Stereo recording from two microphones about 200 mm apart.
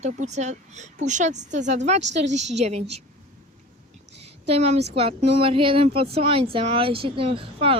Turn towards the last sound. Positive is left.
turn(degrees=-25)  # may be behind; listen again after turning